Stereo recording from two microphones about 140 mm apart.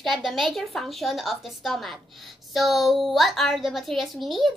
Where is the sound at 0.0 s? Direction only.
Centre (ahead or behind).